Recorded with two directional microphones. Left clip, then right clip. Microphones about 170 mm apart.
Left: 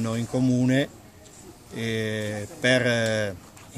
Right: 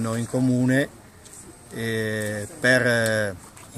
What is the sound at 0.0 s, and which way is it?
Speech, centre (ahead or behind).